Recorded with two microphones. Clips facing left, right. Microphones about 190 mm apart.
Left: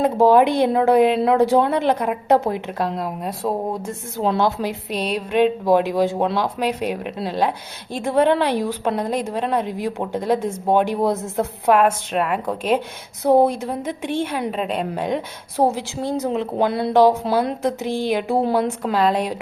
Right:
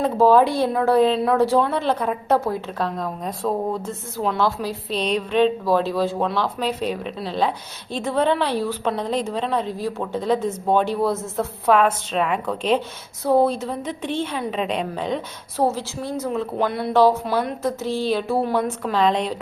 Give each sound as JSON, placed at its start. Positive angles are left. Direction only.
{"t": 0.0, "sound": "a woman's voice", "side_deg": 15}
{"t": 4.2, "sound": "a woman's voice", "side_deg": 25}
{"t": 17.6, "sound": "a woman's voice", "side_deg": 15}